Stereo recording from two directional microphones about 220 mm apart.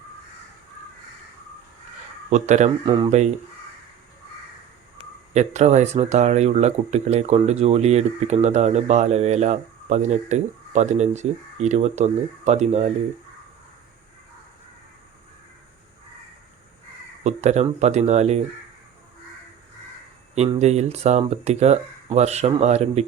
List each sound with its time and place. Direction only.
2.3 s speech: 30° right (ahead or behind)
5.3 s speech: 30° right (ahead or behind)
17.2 s speech: 30° right (ahead or behind)
20.3 s speech: 30° right (ahead or behind)